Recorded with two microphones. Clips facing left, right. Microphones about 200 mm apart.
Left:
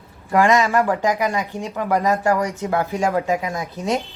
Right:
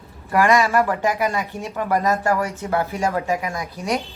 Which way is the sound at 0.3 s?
20° left (ahead or behind).